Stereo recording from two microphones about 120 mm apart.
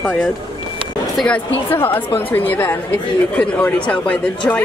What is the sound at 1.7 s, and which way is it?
Speech, 15° left (ahead or behind).